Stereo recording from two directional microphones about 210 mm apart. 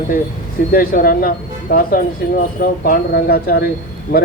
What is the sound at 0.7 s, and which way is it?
A man's voice, 45° left (ahead or behind).